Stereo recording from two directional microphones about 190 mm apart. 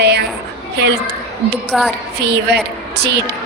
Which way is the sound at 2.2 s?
60° right (ahead or behind).